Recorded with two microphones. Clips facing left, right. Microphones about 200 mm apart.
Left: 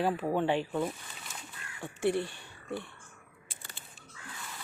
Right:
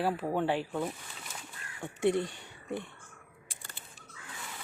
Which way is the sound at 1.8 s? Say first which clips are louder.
Right 1 dB; 20° right (ahead or behind).